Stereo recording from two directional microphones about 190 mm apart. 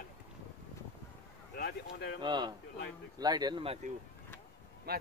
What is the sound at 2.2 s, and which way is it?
Speech, 25° right (ahead or behind).